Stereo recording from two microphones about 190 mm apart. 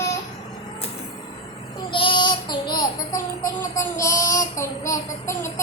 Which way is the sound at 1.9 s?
25° left (ahead or behind).